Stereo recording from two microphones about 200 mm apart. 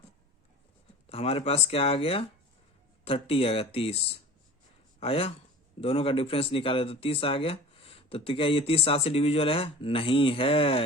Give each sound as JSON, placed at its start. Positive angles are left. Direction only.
{"t": 1.1, "sound": "speech", "side_deg": 30}